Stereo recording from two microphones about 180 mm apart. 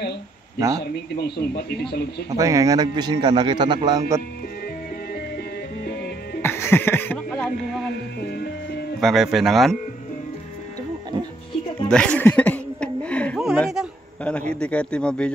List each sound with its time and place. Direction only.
0.7 s speech: 65° left (ahead or behind)
2.3 s a man's voice: 20° right (ahead or behind)
5.9 s music: 65° left (ahead or behind)
6.4 s music: 15° left (ahead or behind)
8.2 s music: 65° left (ahead or behind)
9.0 s a man's voice: centre (ahead or behind)
11.9 s speech: 5° left (ahead or behind)